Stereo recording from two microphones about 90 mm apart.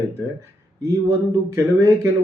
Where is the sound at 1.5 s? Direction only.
35° right (ahead or behind).